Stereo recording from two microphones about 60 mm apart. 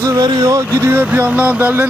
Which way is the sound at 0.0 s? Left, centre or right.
Right.